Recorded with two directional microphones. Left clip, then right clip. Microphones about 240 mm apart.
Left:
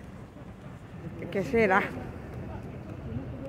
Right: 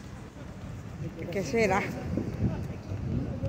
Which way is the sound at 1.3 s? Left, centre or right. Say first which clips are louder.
Left 3 dB; centre.